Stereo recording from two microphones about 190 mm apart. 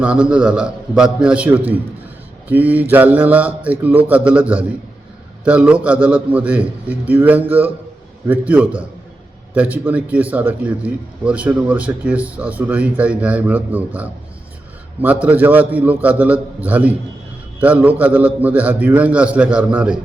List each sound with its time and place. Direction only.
0.0 s a man's voice: 5° right (ahead or behind)